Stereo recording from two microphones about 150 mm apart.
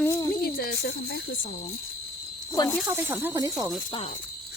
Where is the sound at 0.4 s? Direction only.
90° left.